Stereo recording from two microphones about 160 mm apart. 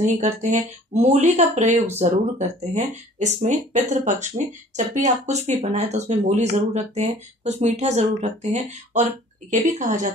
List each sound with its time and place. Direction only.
0.0 s speech: 50° right (ahead or behind)